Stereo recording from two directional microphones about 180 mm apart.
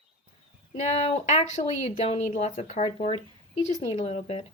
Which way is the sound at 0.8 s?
35° left (ahead or behind).